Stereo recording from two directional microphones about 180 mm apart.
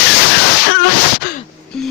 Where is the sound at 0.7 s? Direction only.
55° left (ahead or behind).